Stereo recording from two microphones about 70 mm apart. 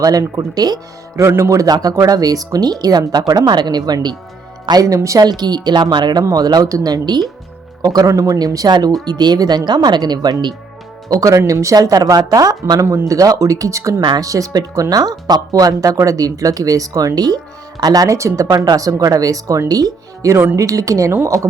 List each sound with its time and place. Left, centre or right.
0.0 s speech: right
1.4 s speech: right
1.6 s a woman's voice: right
1.9 s a woman's voice: right
4.7 s speech: right
4.9 s speech: right
5.2 s speech: right
6.3 s a woman's voice: right
11.1 s speech: right
11.8 s a woman's voice: right
12.8 s speech: right
17.2 s speech: right